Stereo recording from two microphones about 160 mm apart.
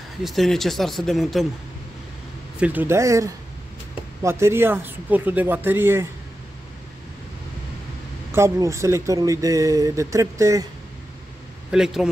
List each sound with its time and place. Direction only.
0.2 s speech: centre (ahead or behind)
2.6 s speech: 10° right (ahead or behind)
8.3 s speech: 20° right (ahead or behind)
11.7 s speech: 5° right (ahead or behind)